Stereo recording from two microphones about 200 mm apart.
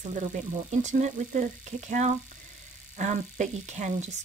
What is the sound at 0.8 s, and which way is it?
Speech, 35° right (ahead or behind).